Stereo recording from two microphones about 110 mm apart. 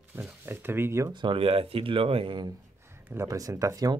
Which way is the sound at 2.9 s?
20° right (ahead or behind).